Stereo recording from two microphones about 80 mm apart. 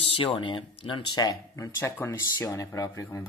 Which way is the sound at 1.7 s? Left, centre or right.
Left.